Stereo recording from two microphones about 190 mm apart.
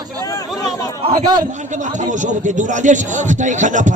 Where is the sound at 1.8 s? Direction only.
40° right (ahead or behind).